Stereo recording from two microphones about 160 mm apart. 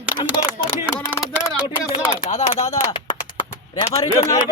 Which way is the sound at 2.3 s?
45° left (ahead or behind).